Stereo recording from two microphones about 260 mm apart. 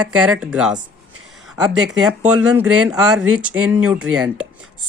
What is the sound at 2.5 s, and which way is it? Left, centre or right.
Speech, centre.